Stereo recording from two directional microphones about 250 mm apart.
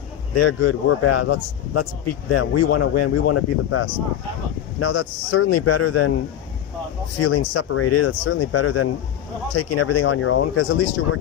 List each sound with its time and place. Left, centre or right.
0.3 s speech: left
2.3 s speech: left
7.2 s speech: left